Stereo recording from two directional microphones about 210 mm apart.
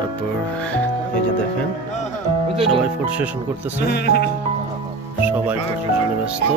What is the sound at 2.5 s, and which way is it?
Speech, 25° right (ahead or behind).